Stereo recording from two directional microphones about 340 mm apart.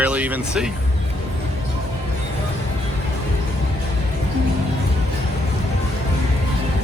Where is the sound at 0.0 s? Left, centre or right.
Centre.